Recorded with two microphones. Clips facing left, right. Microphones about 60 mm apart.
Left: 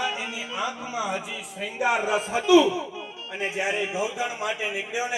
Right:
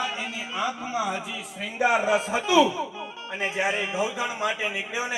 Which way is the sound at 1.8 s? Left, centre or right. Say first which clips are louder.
Right 2 dB; right.